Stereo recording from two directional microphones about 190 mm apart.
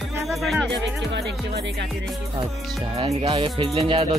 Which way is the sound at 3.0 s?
30° right (ahead or behind).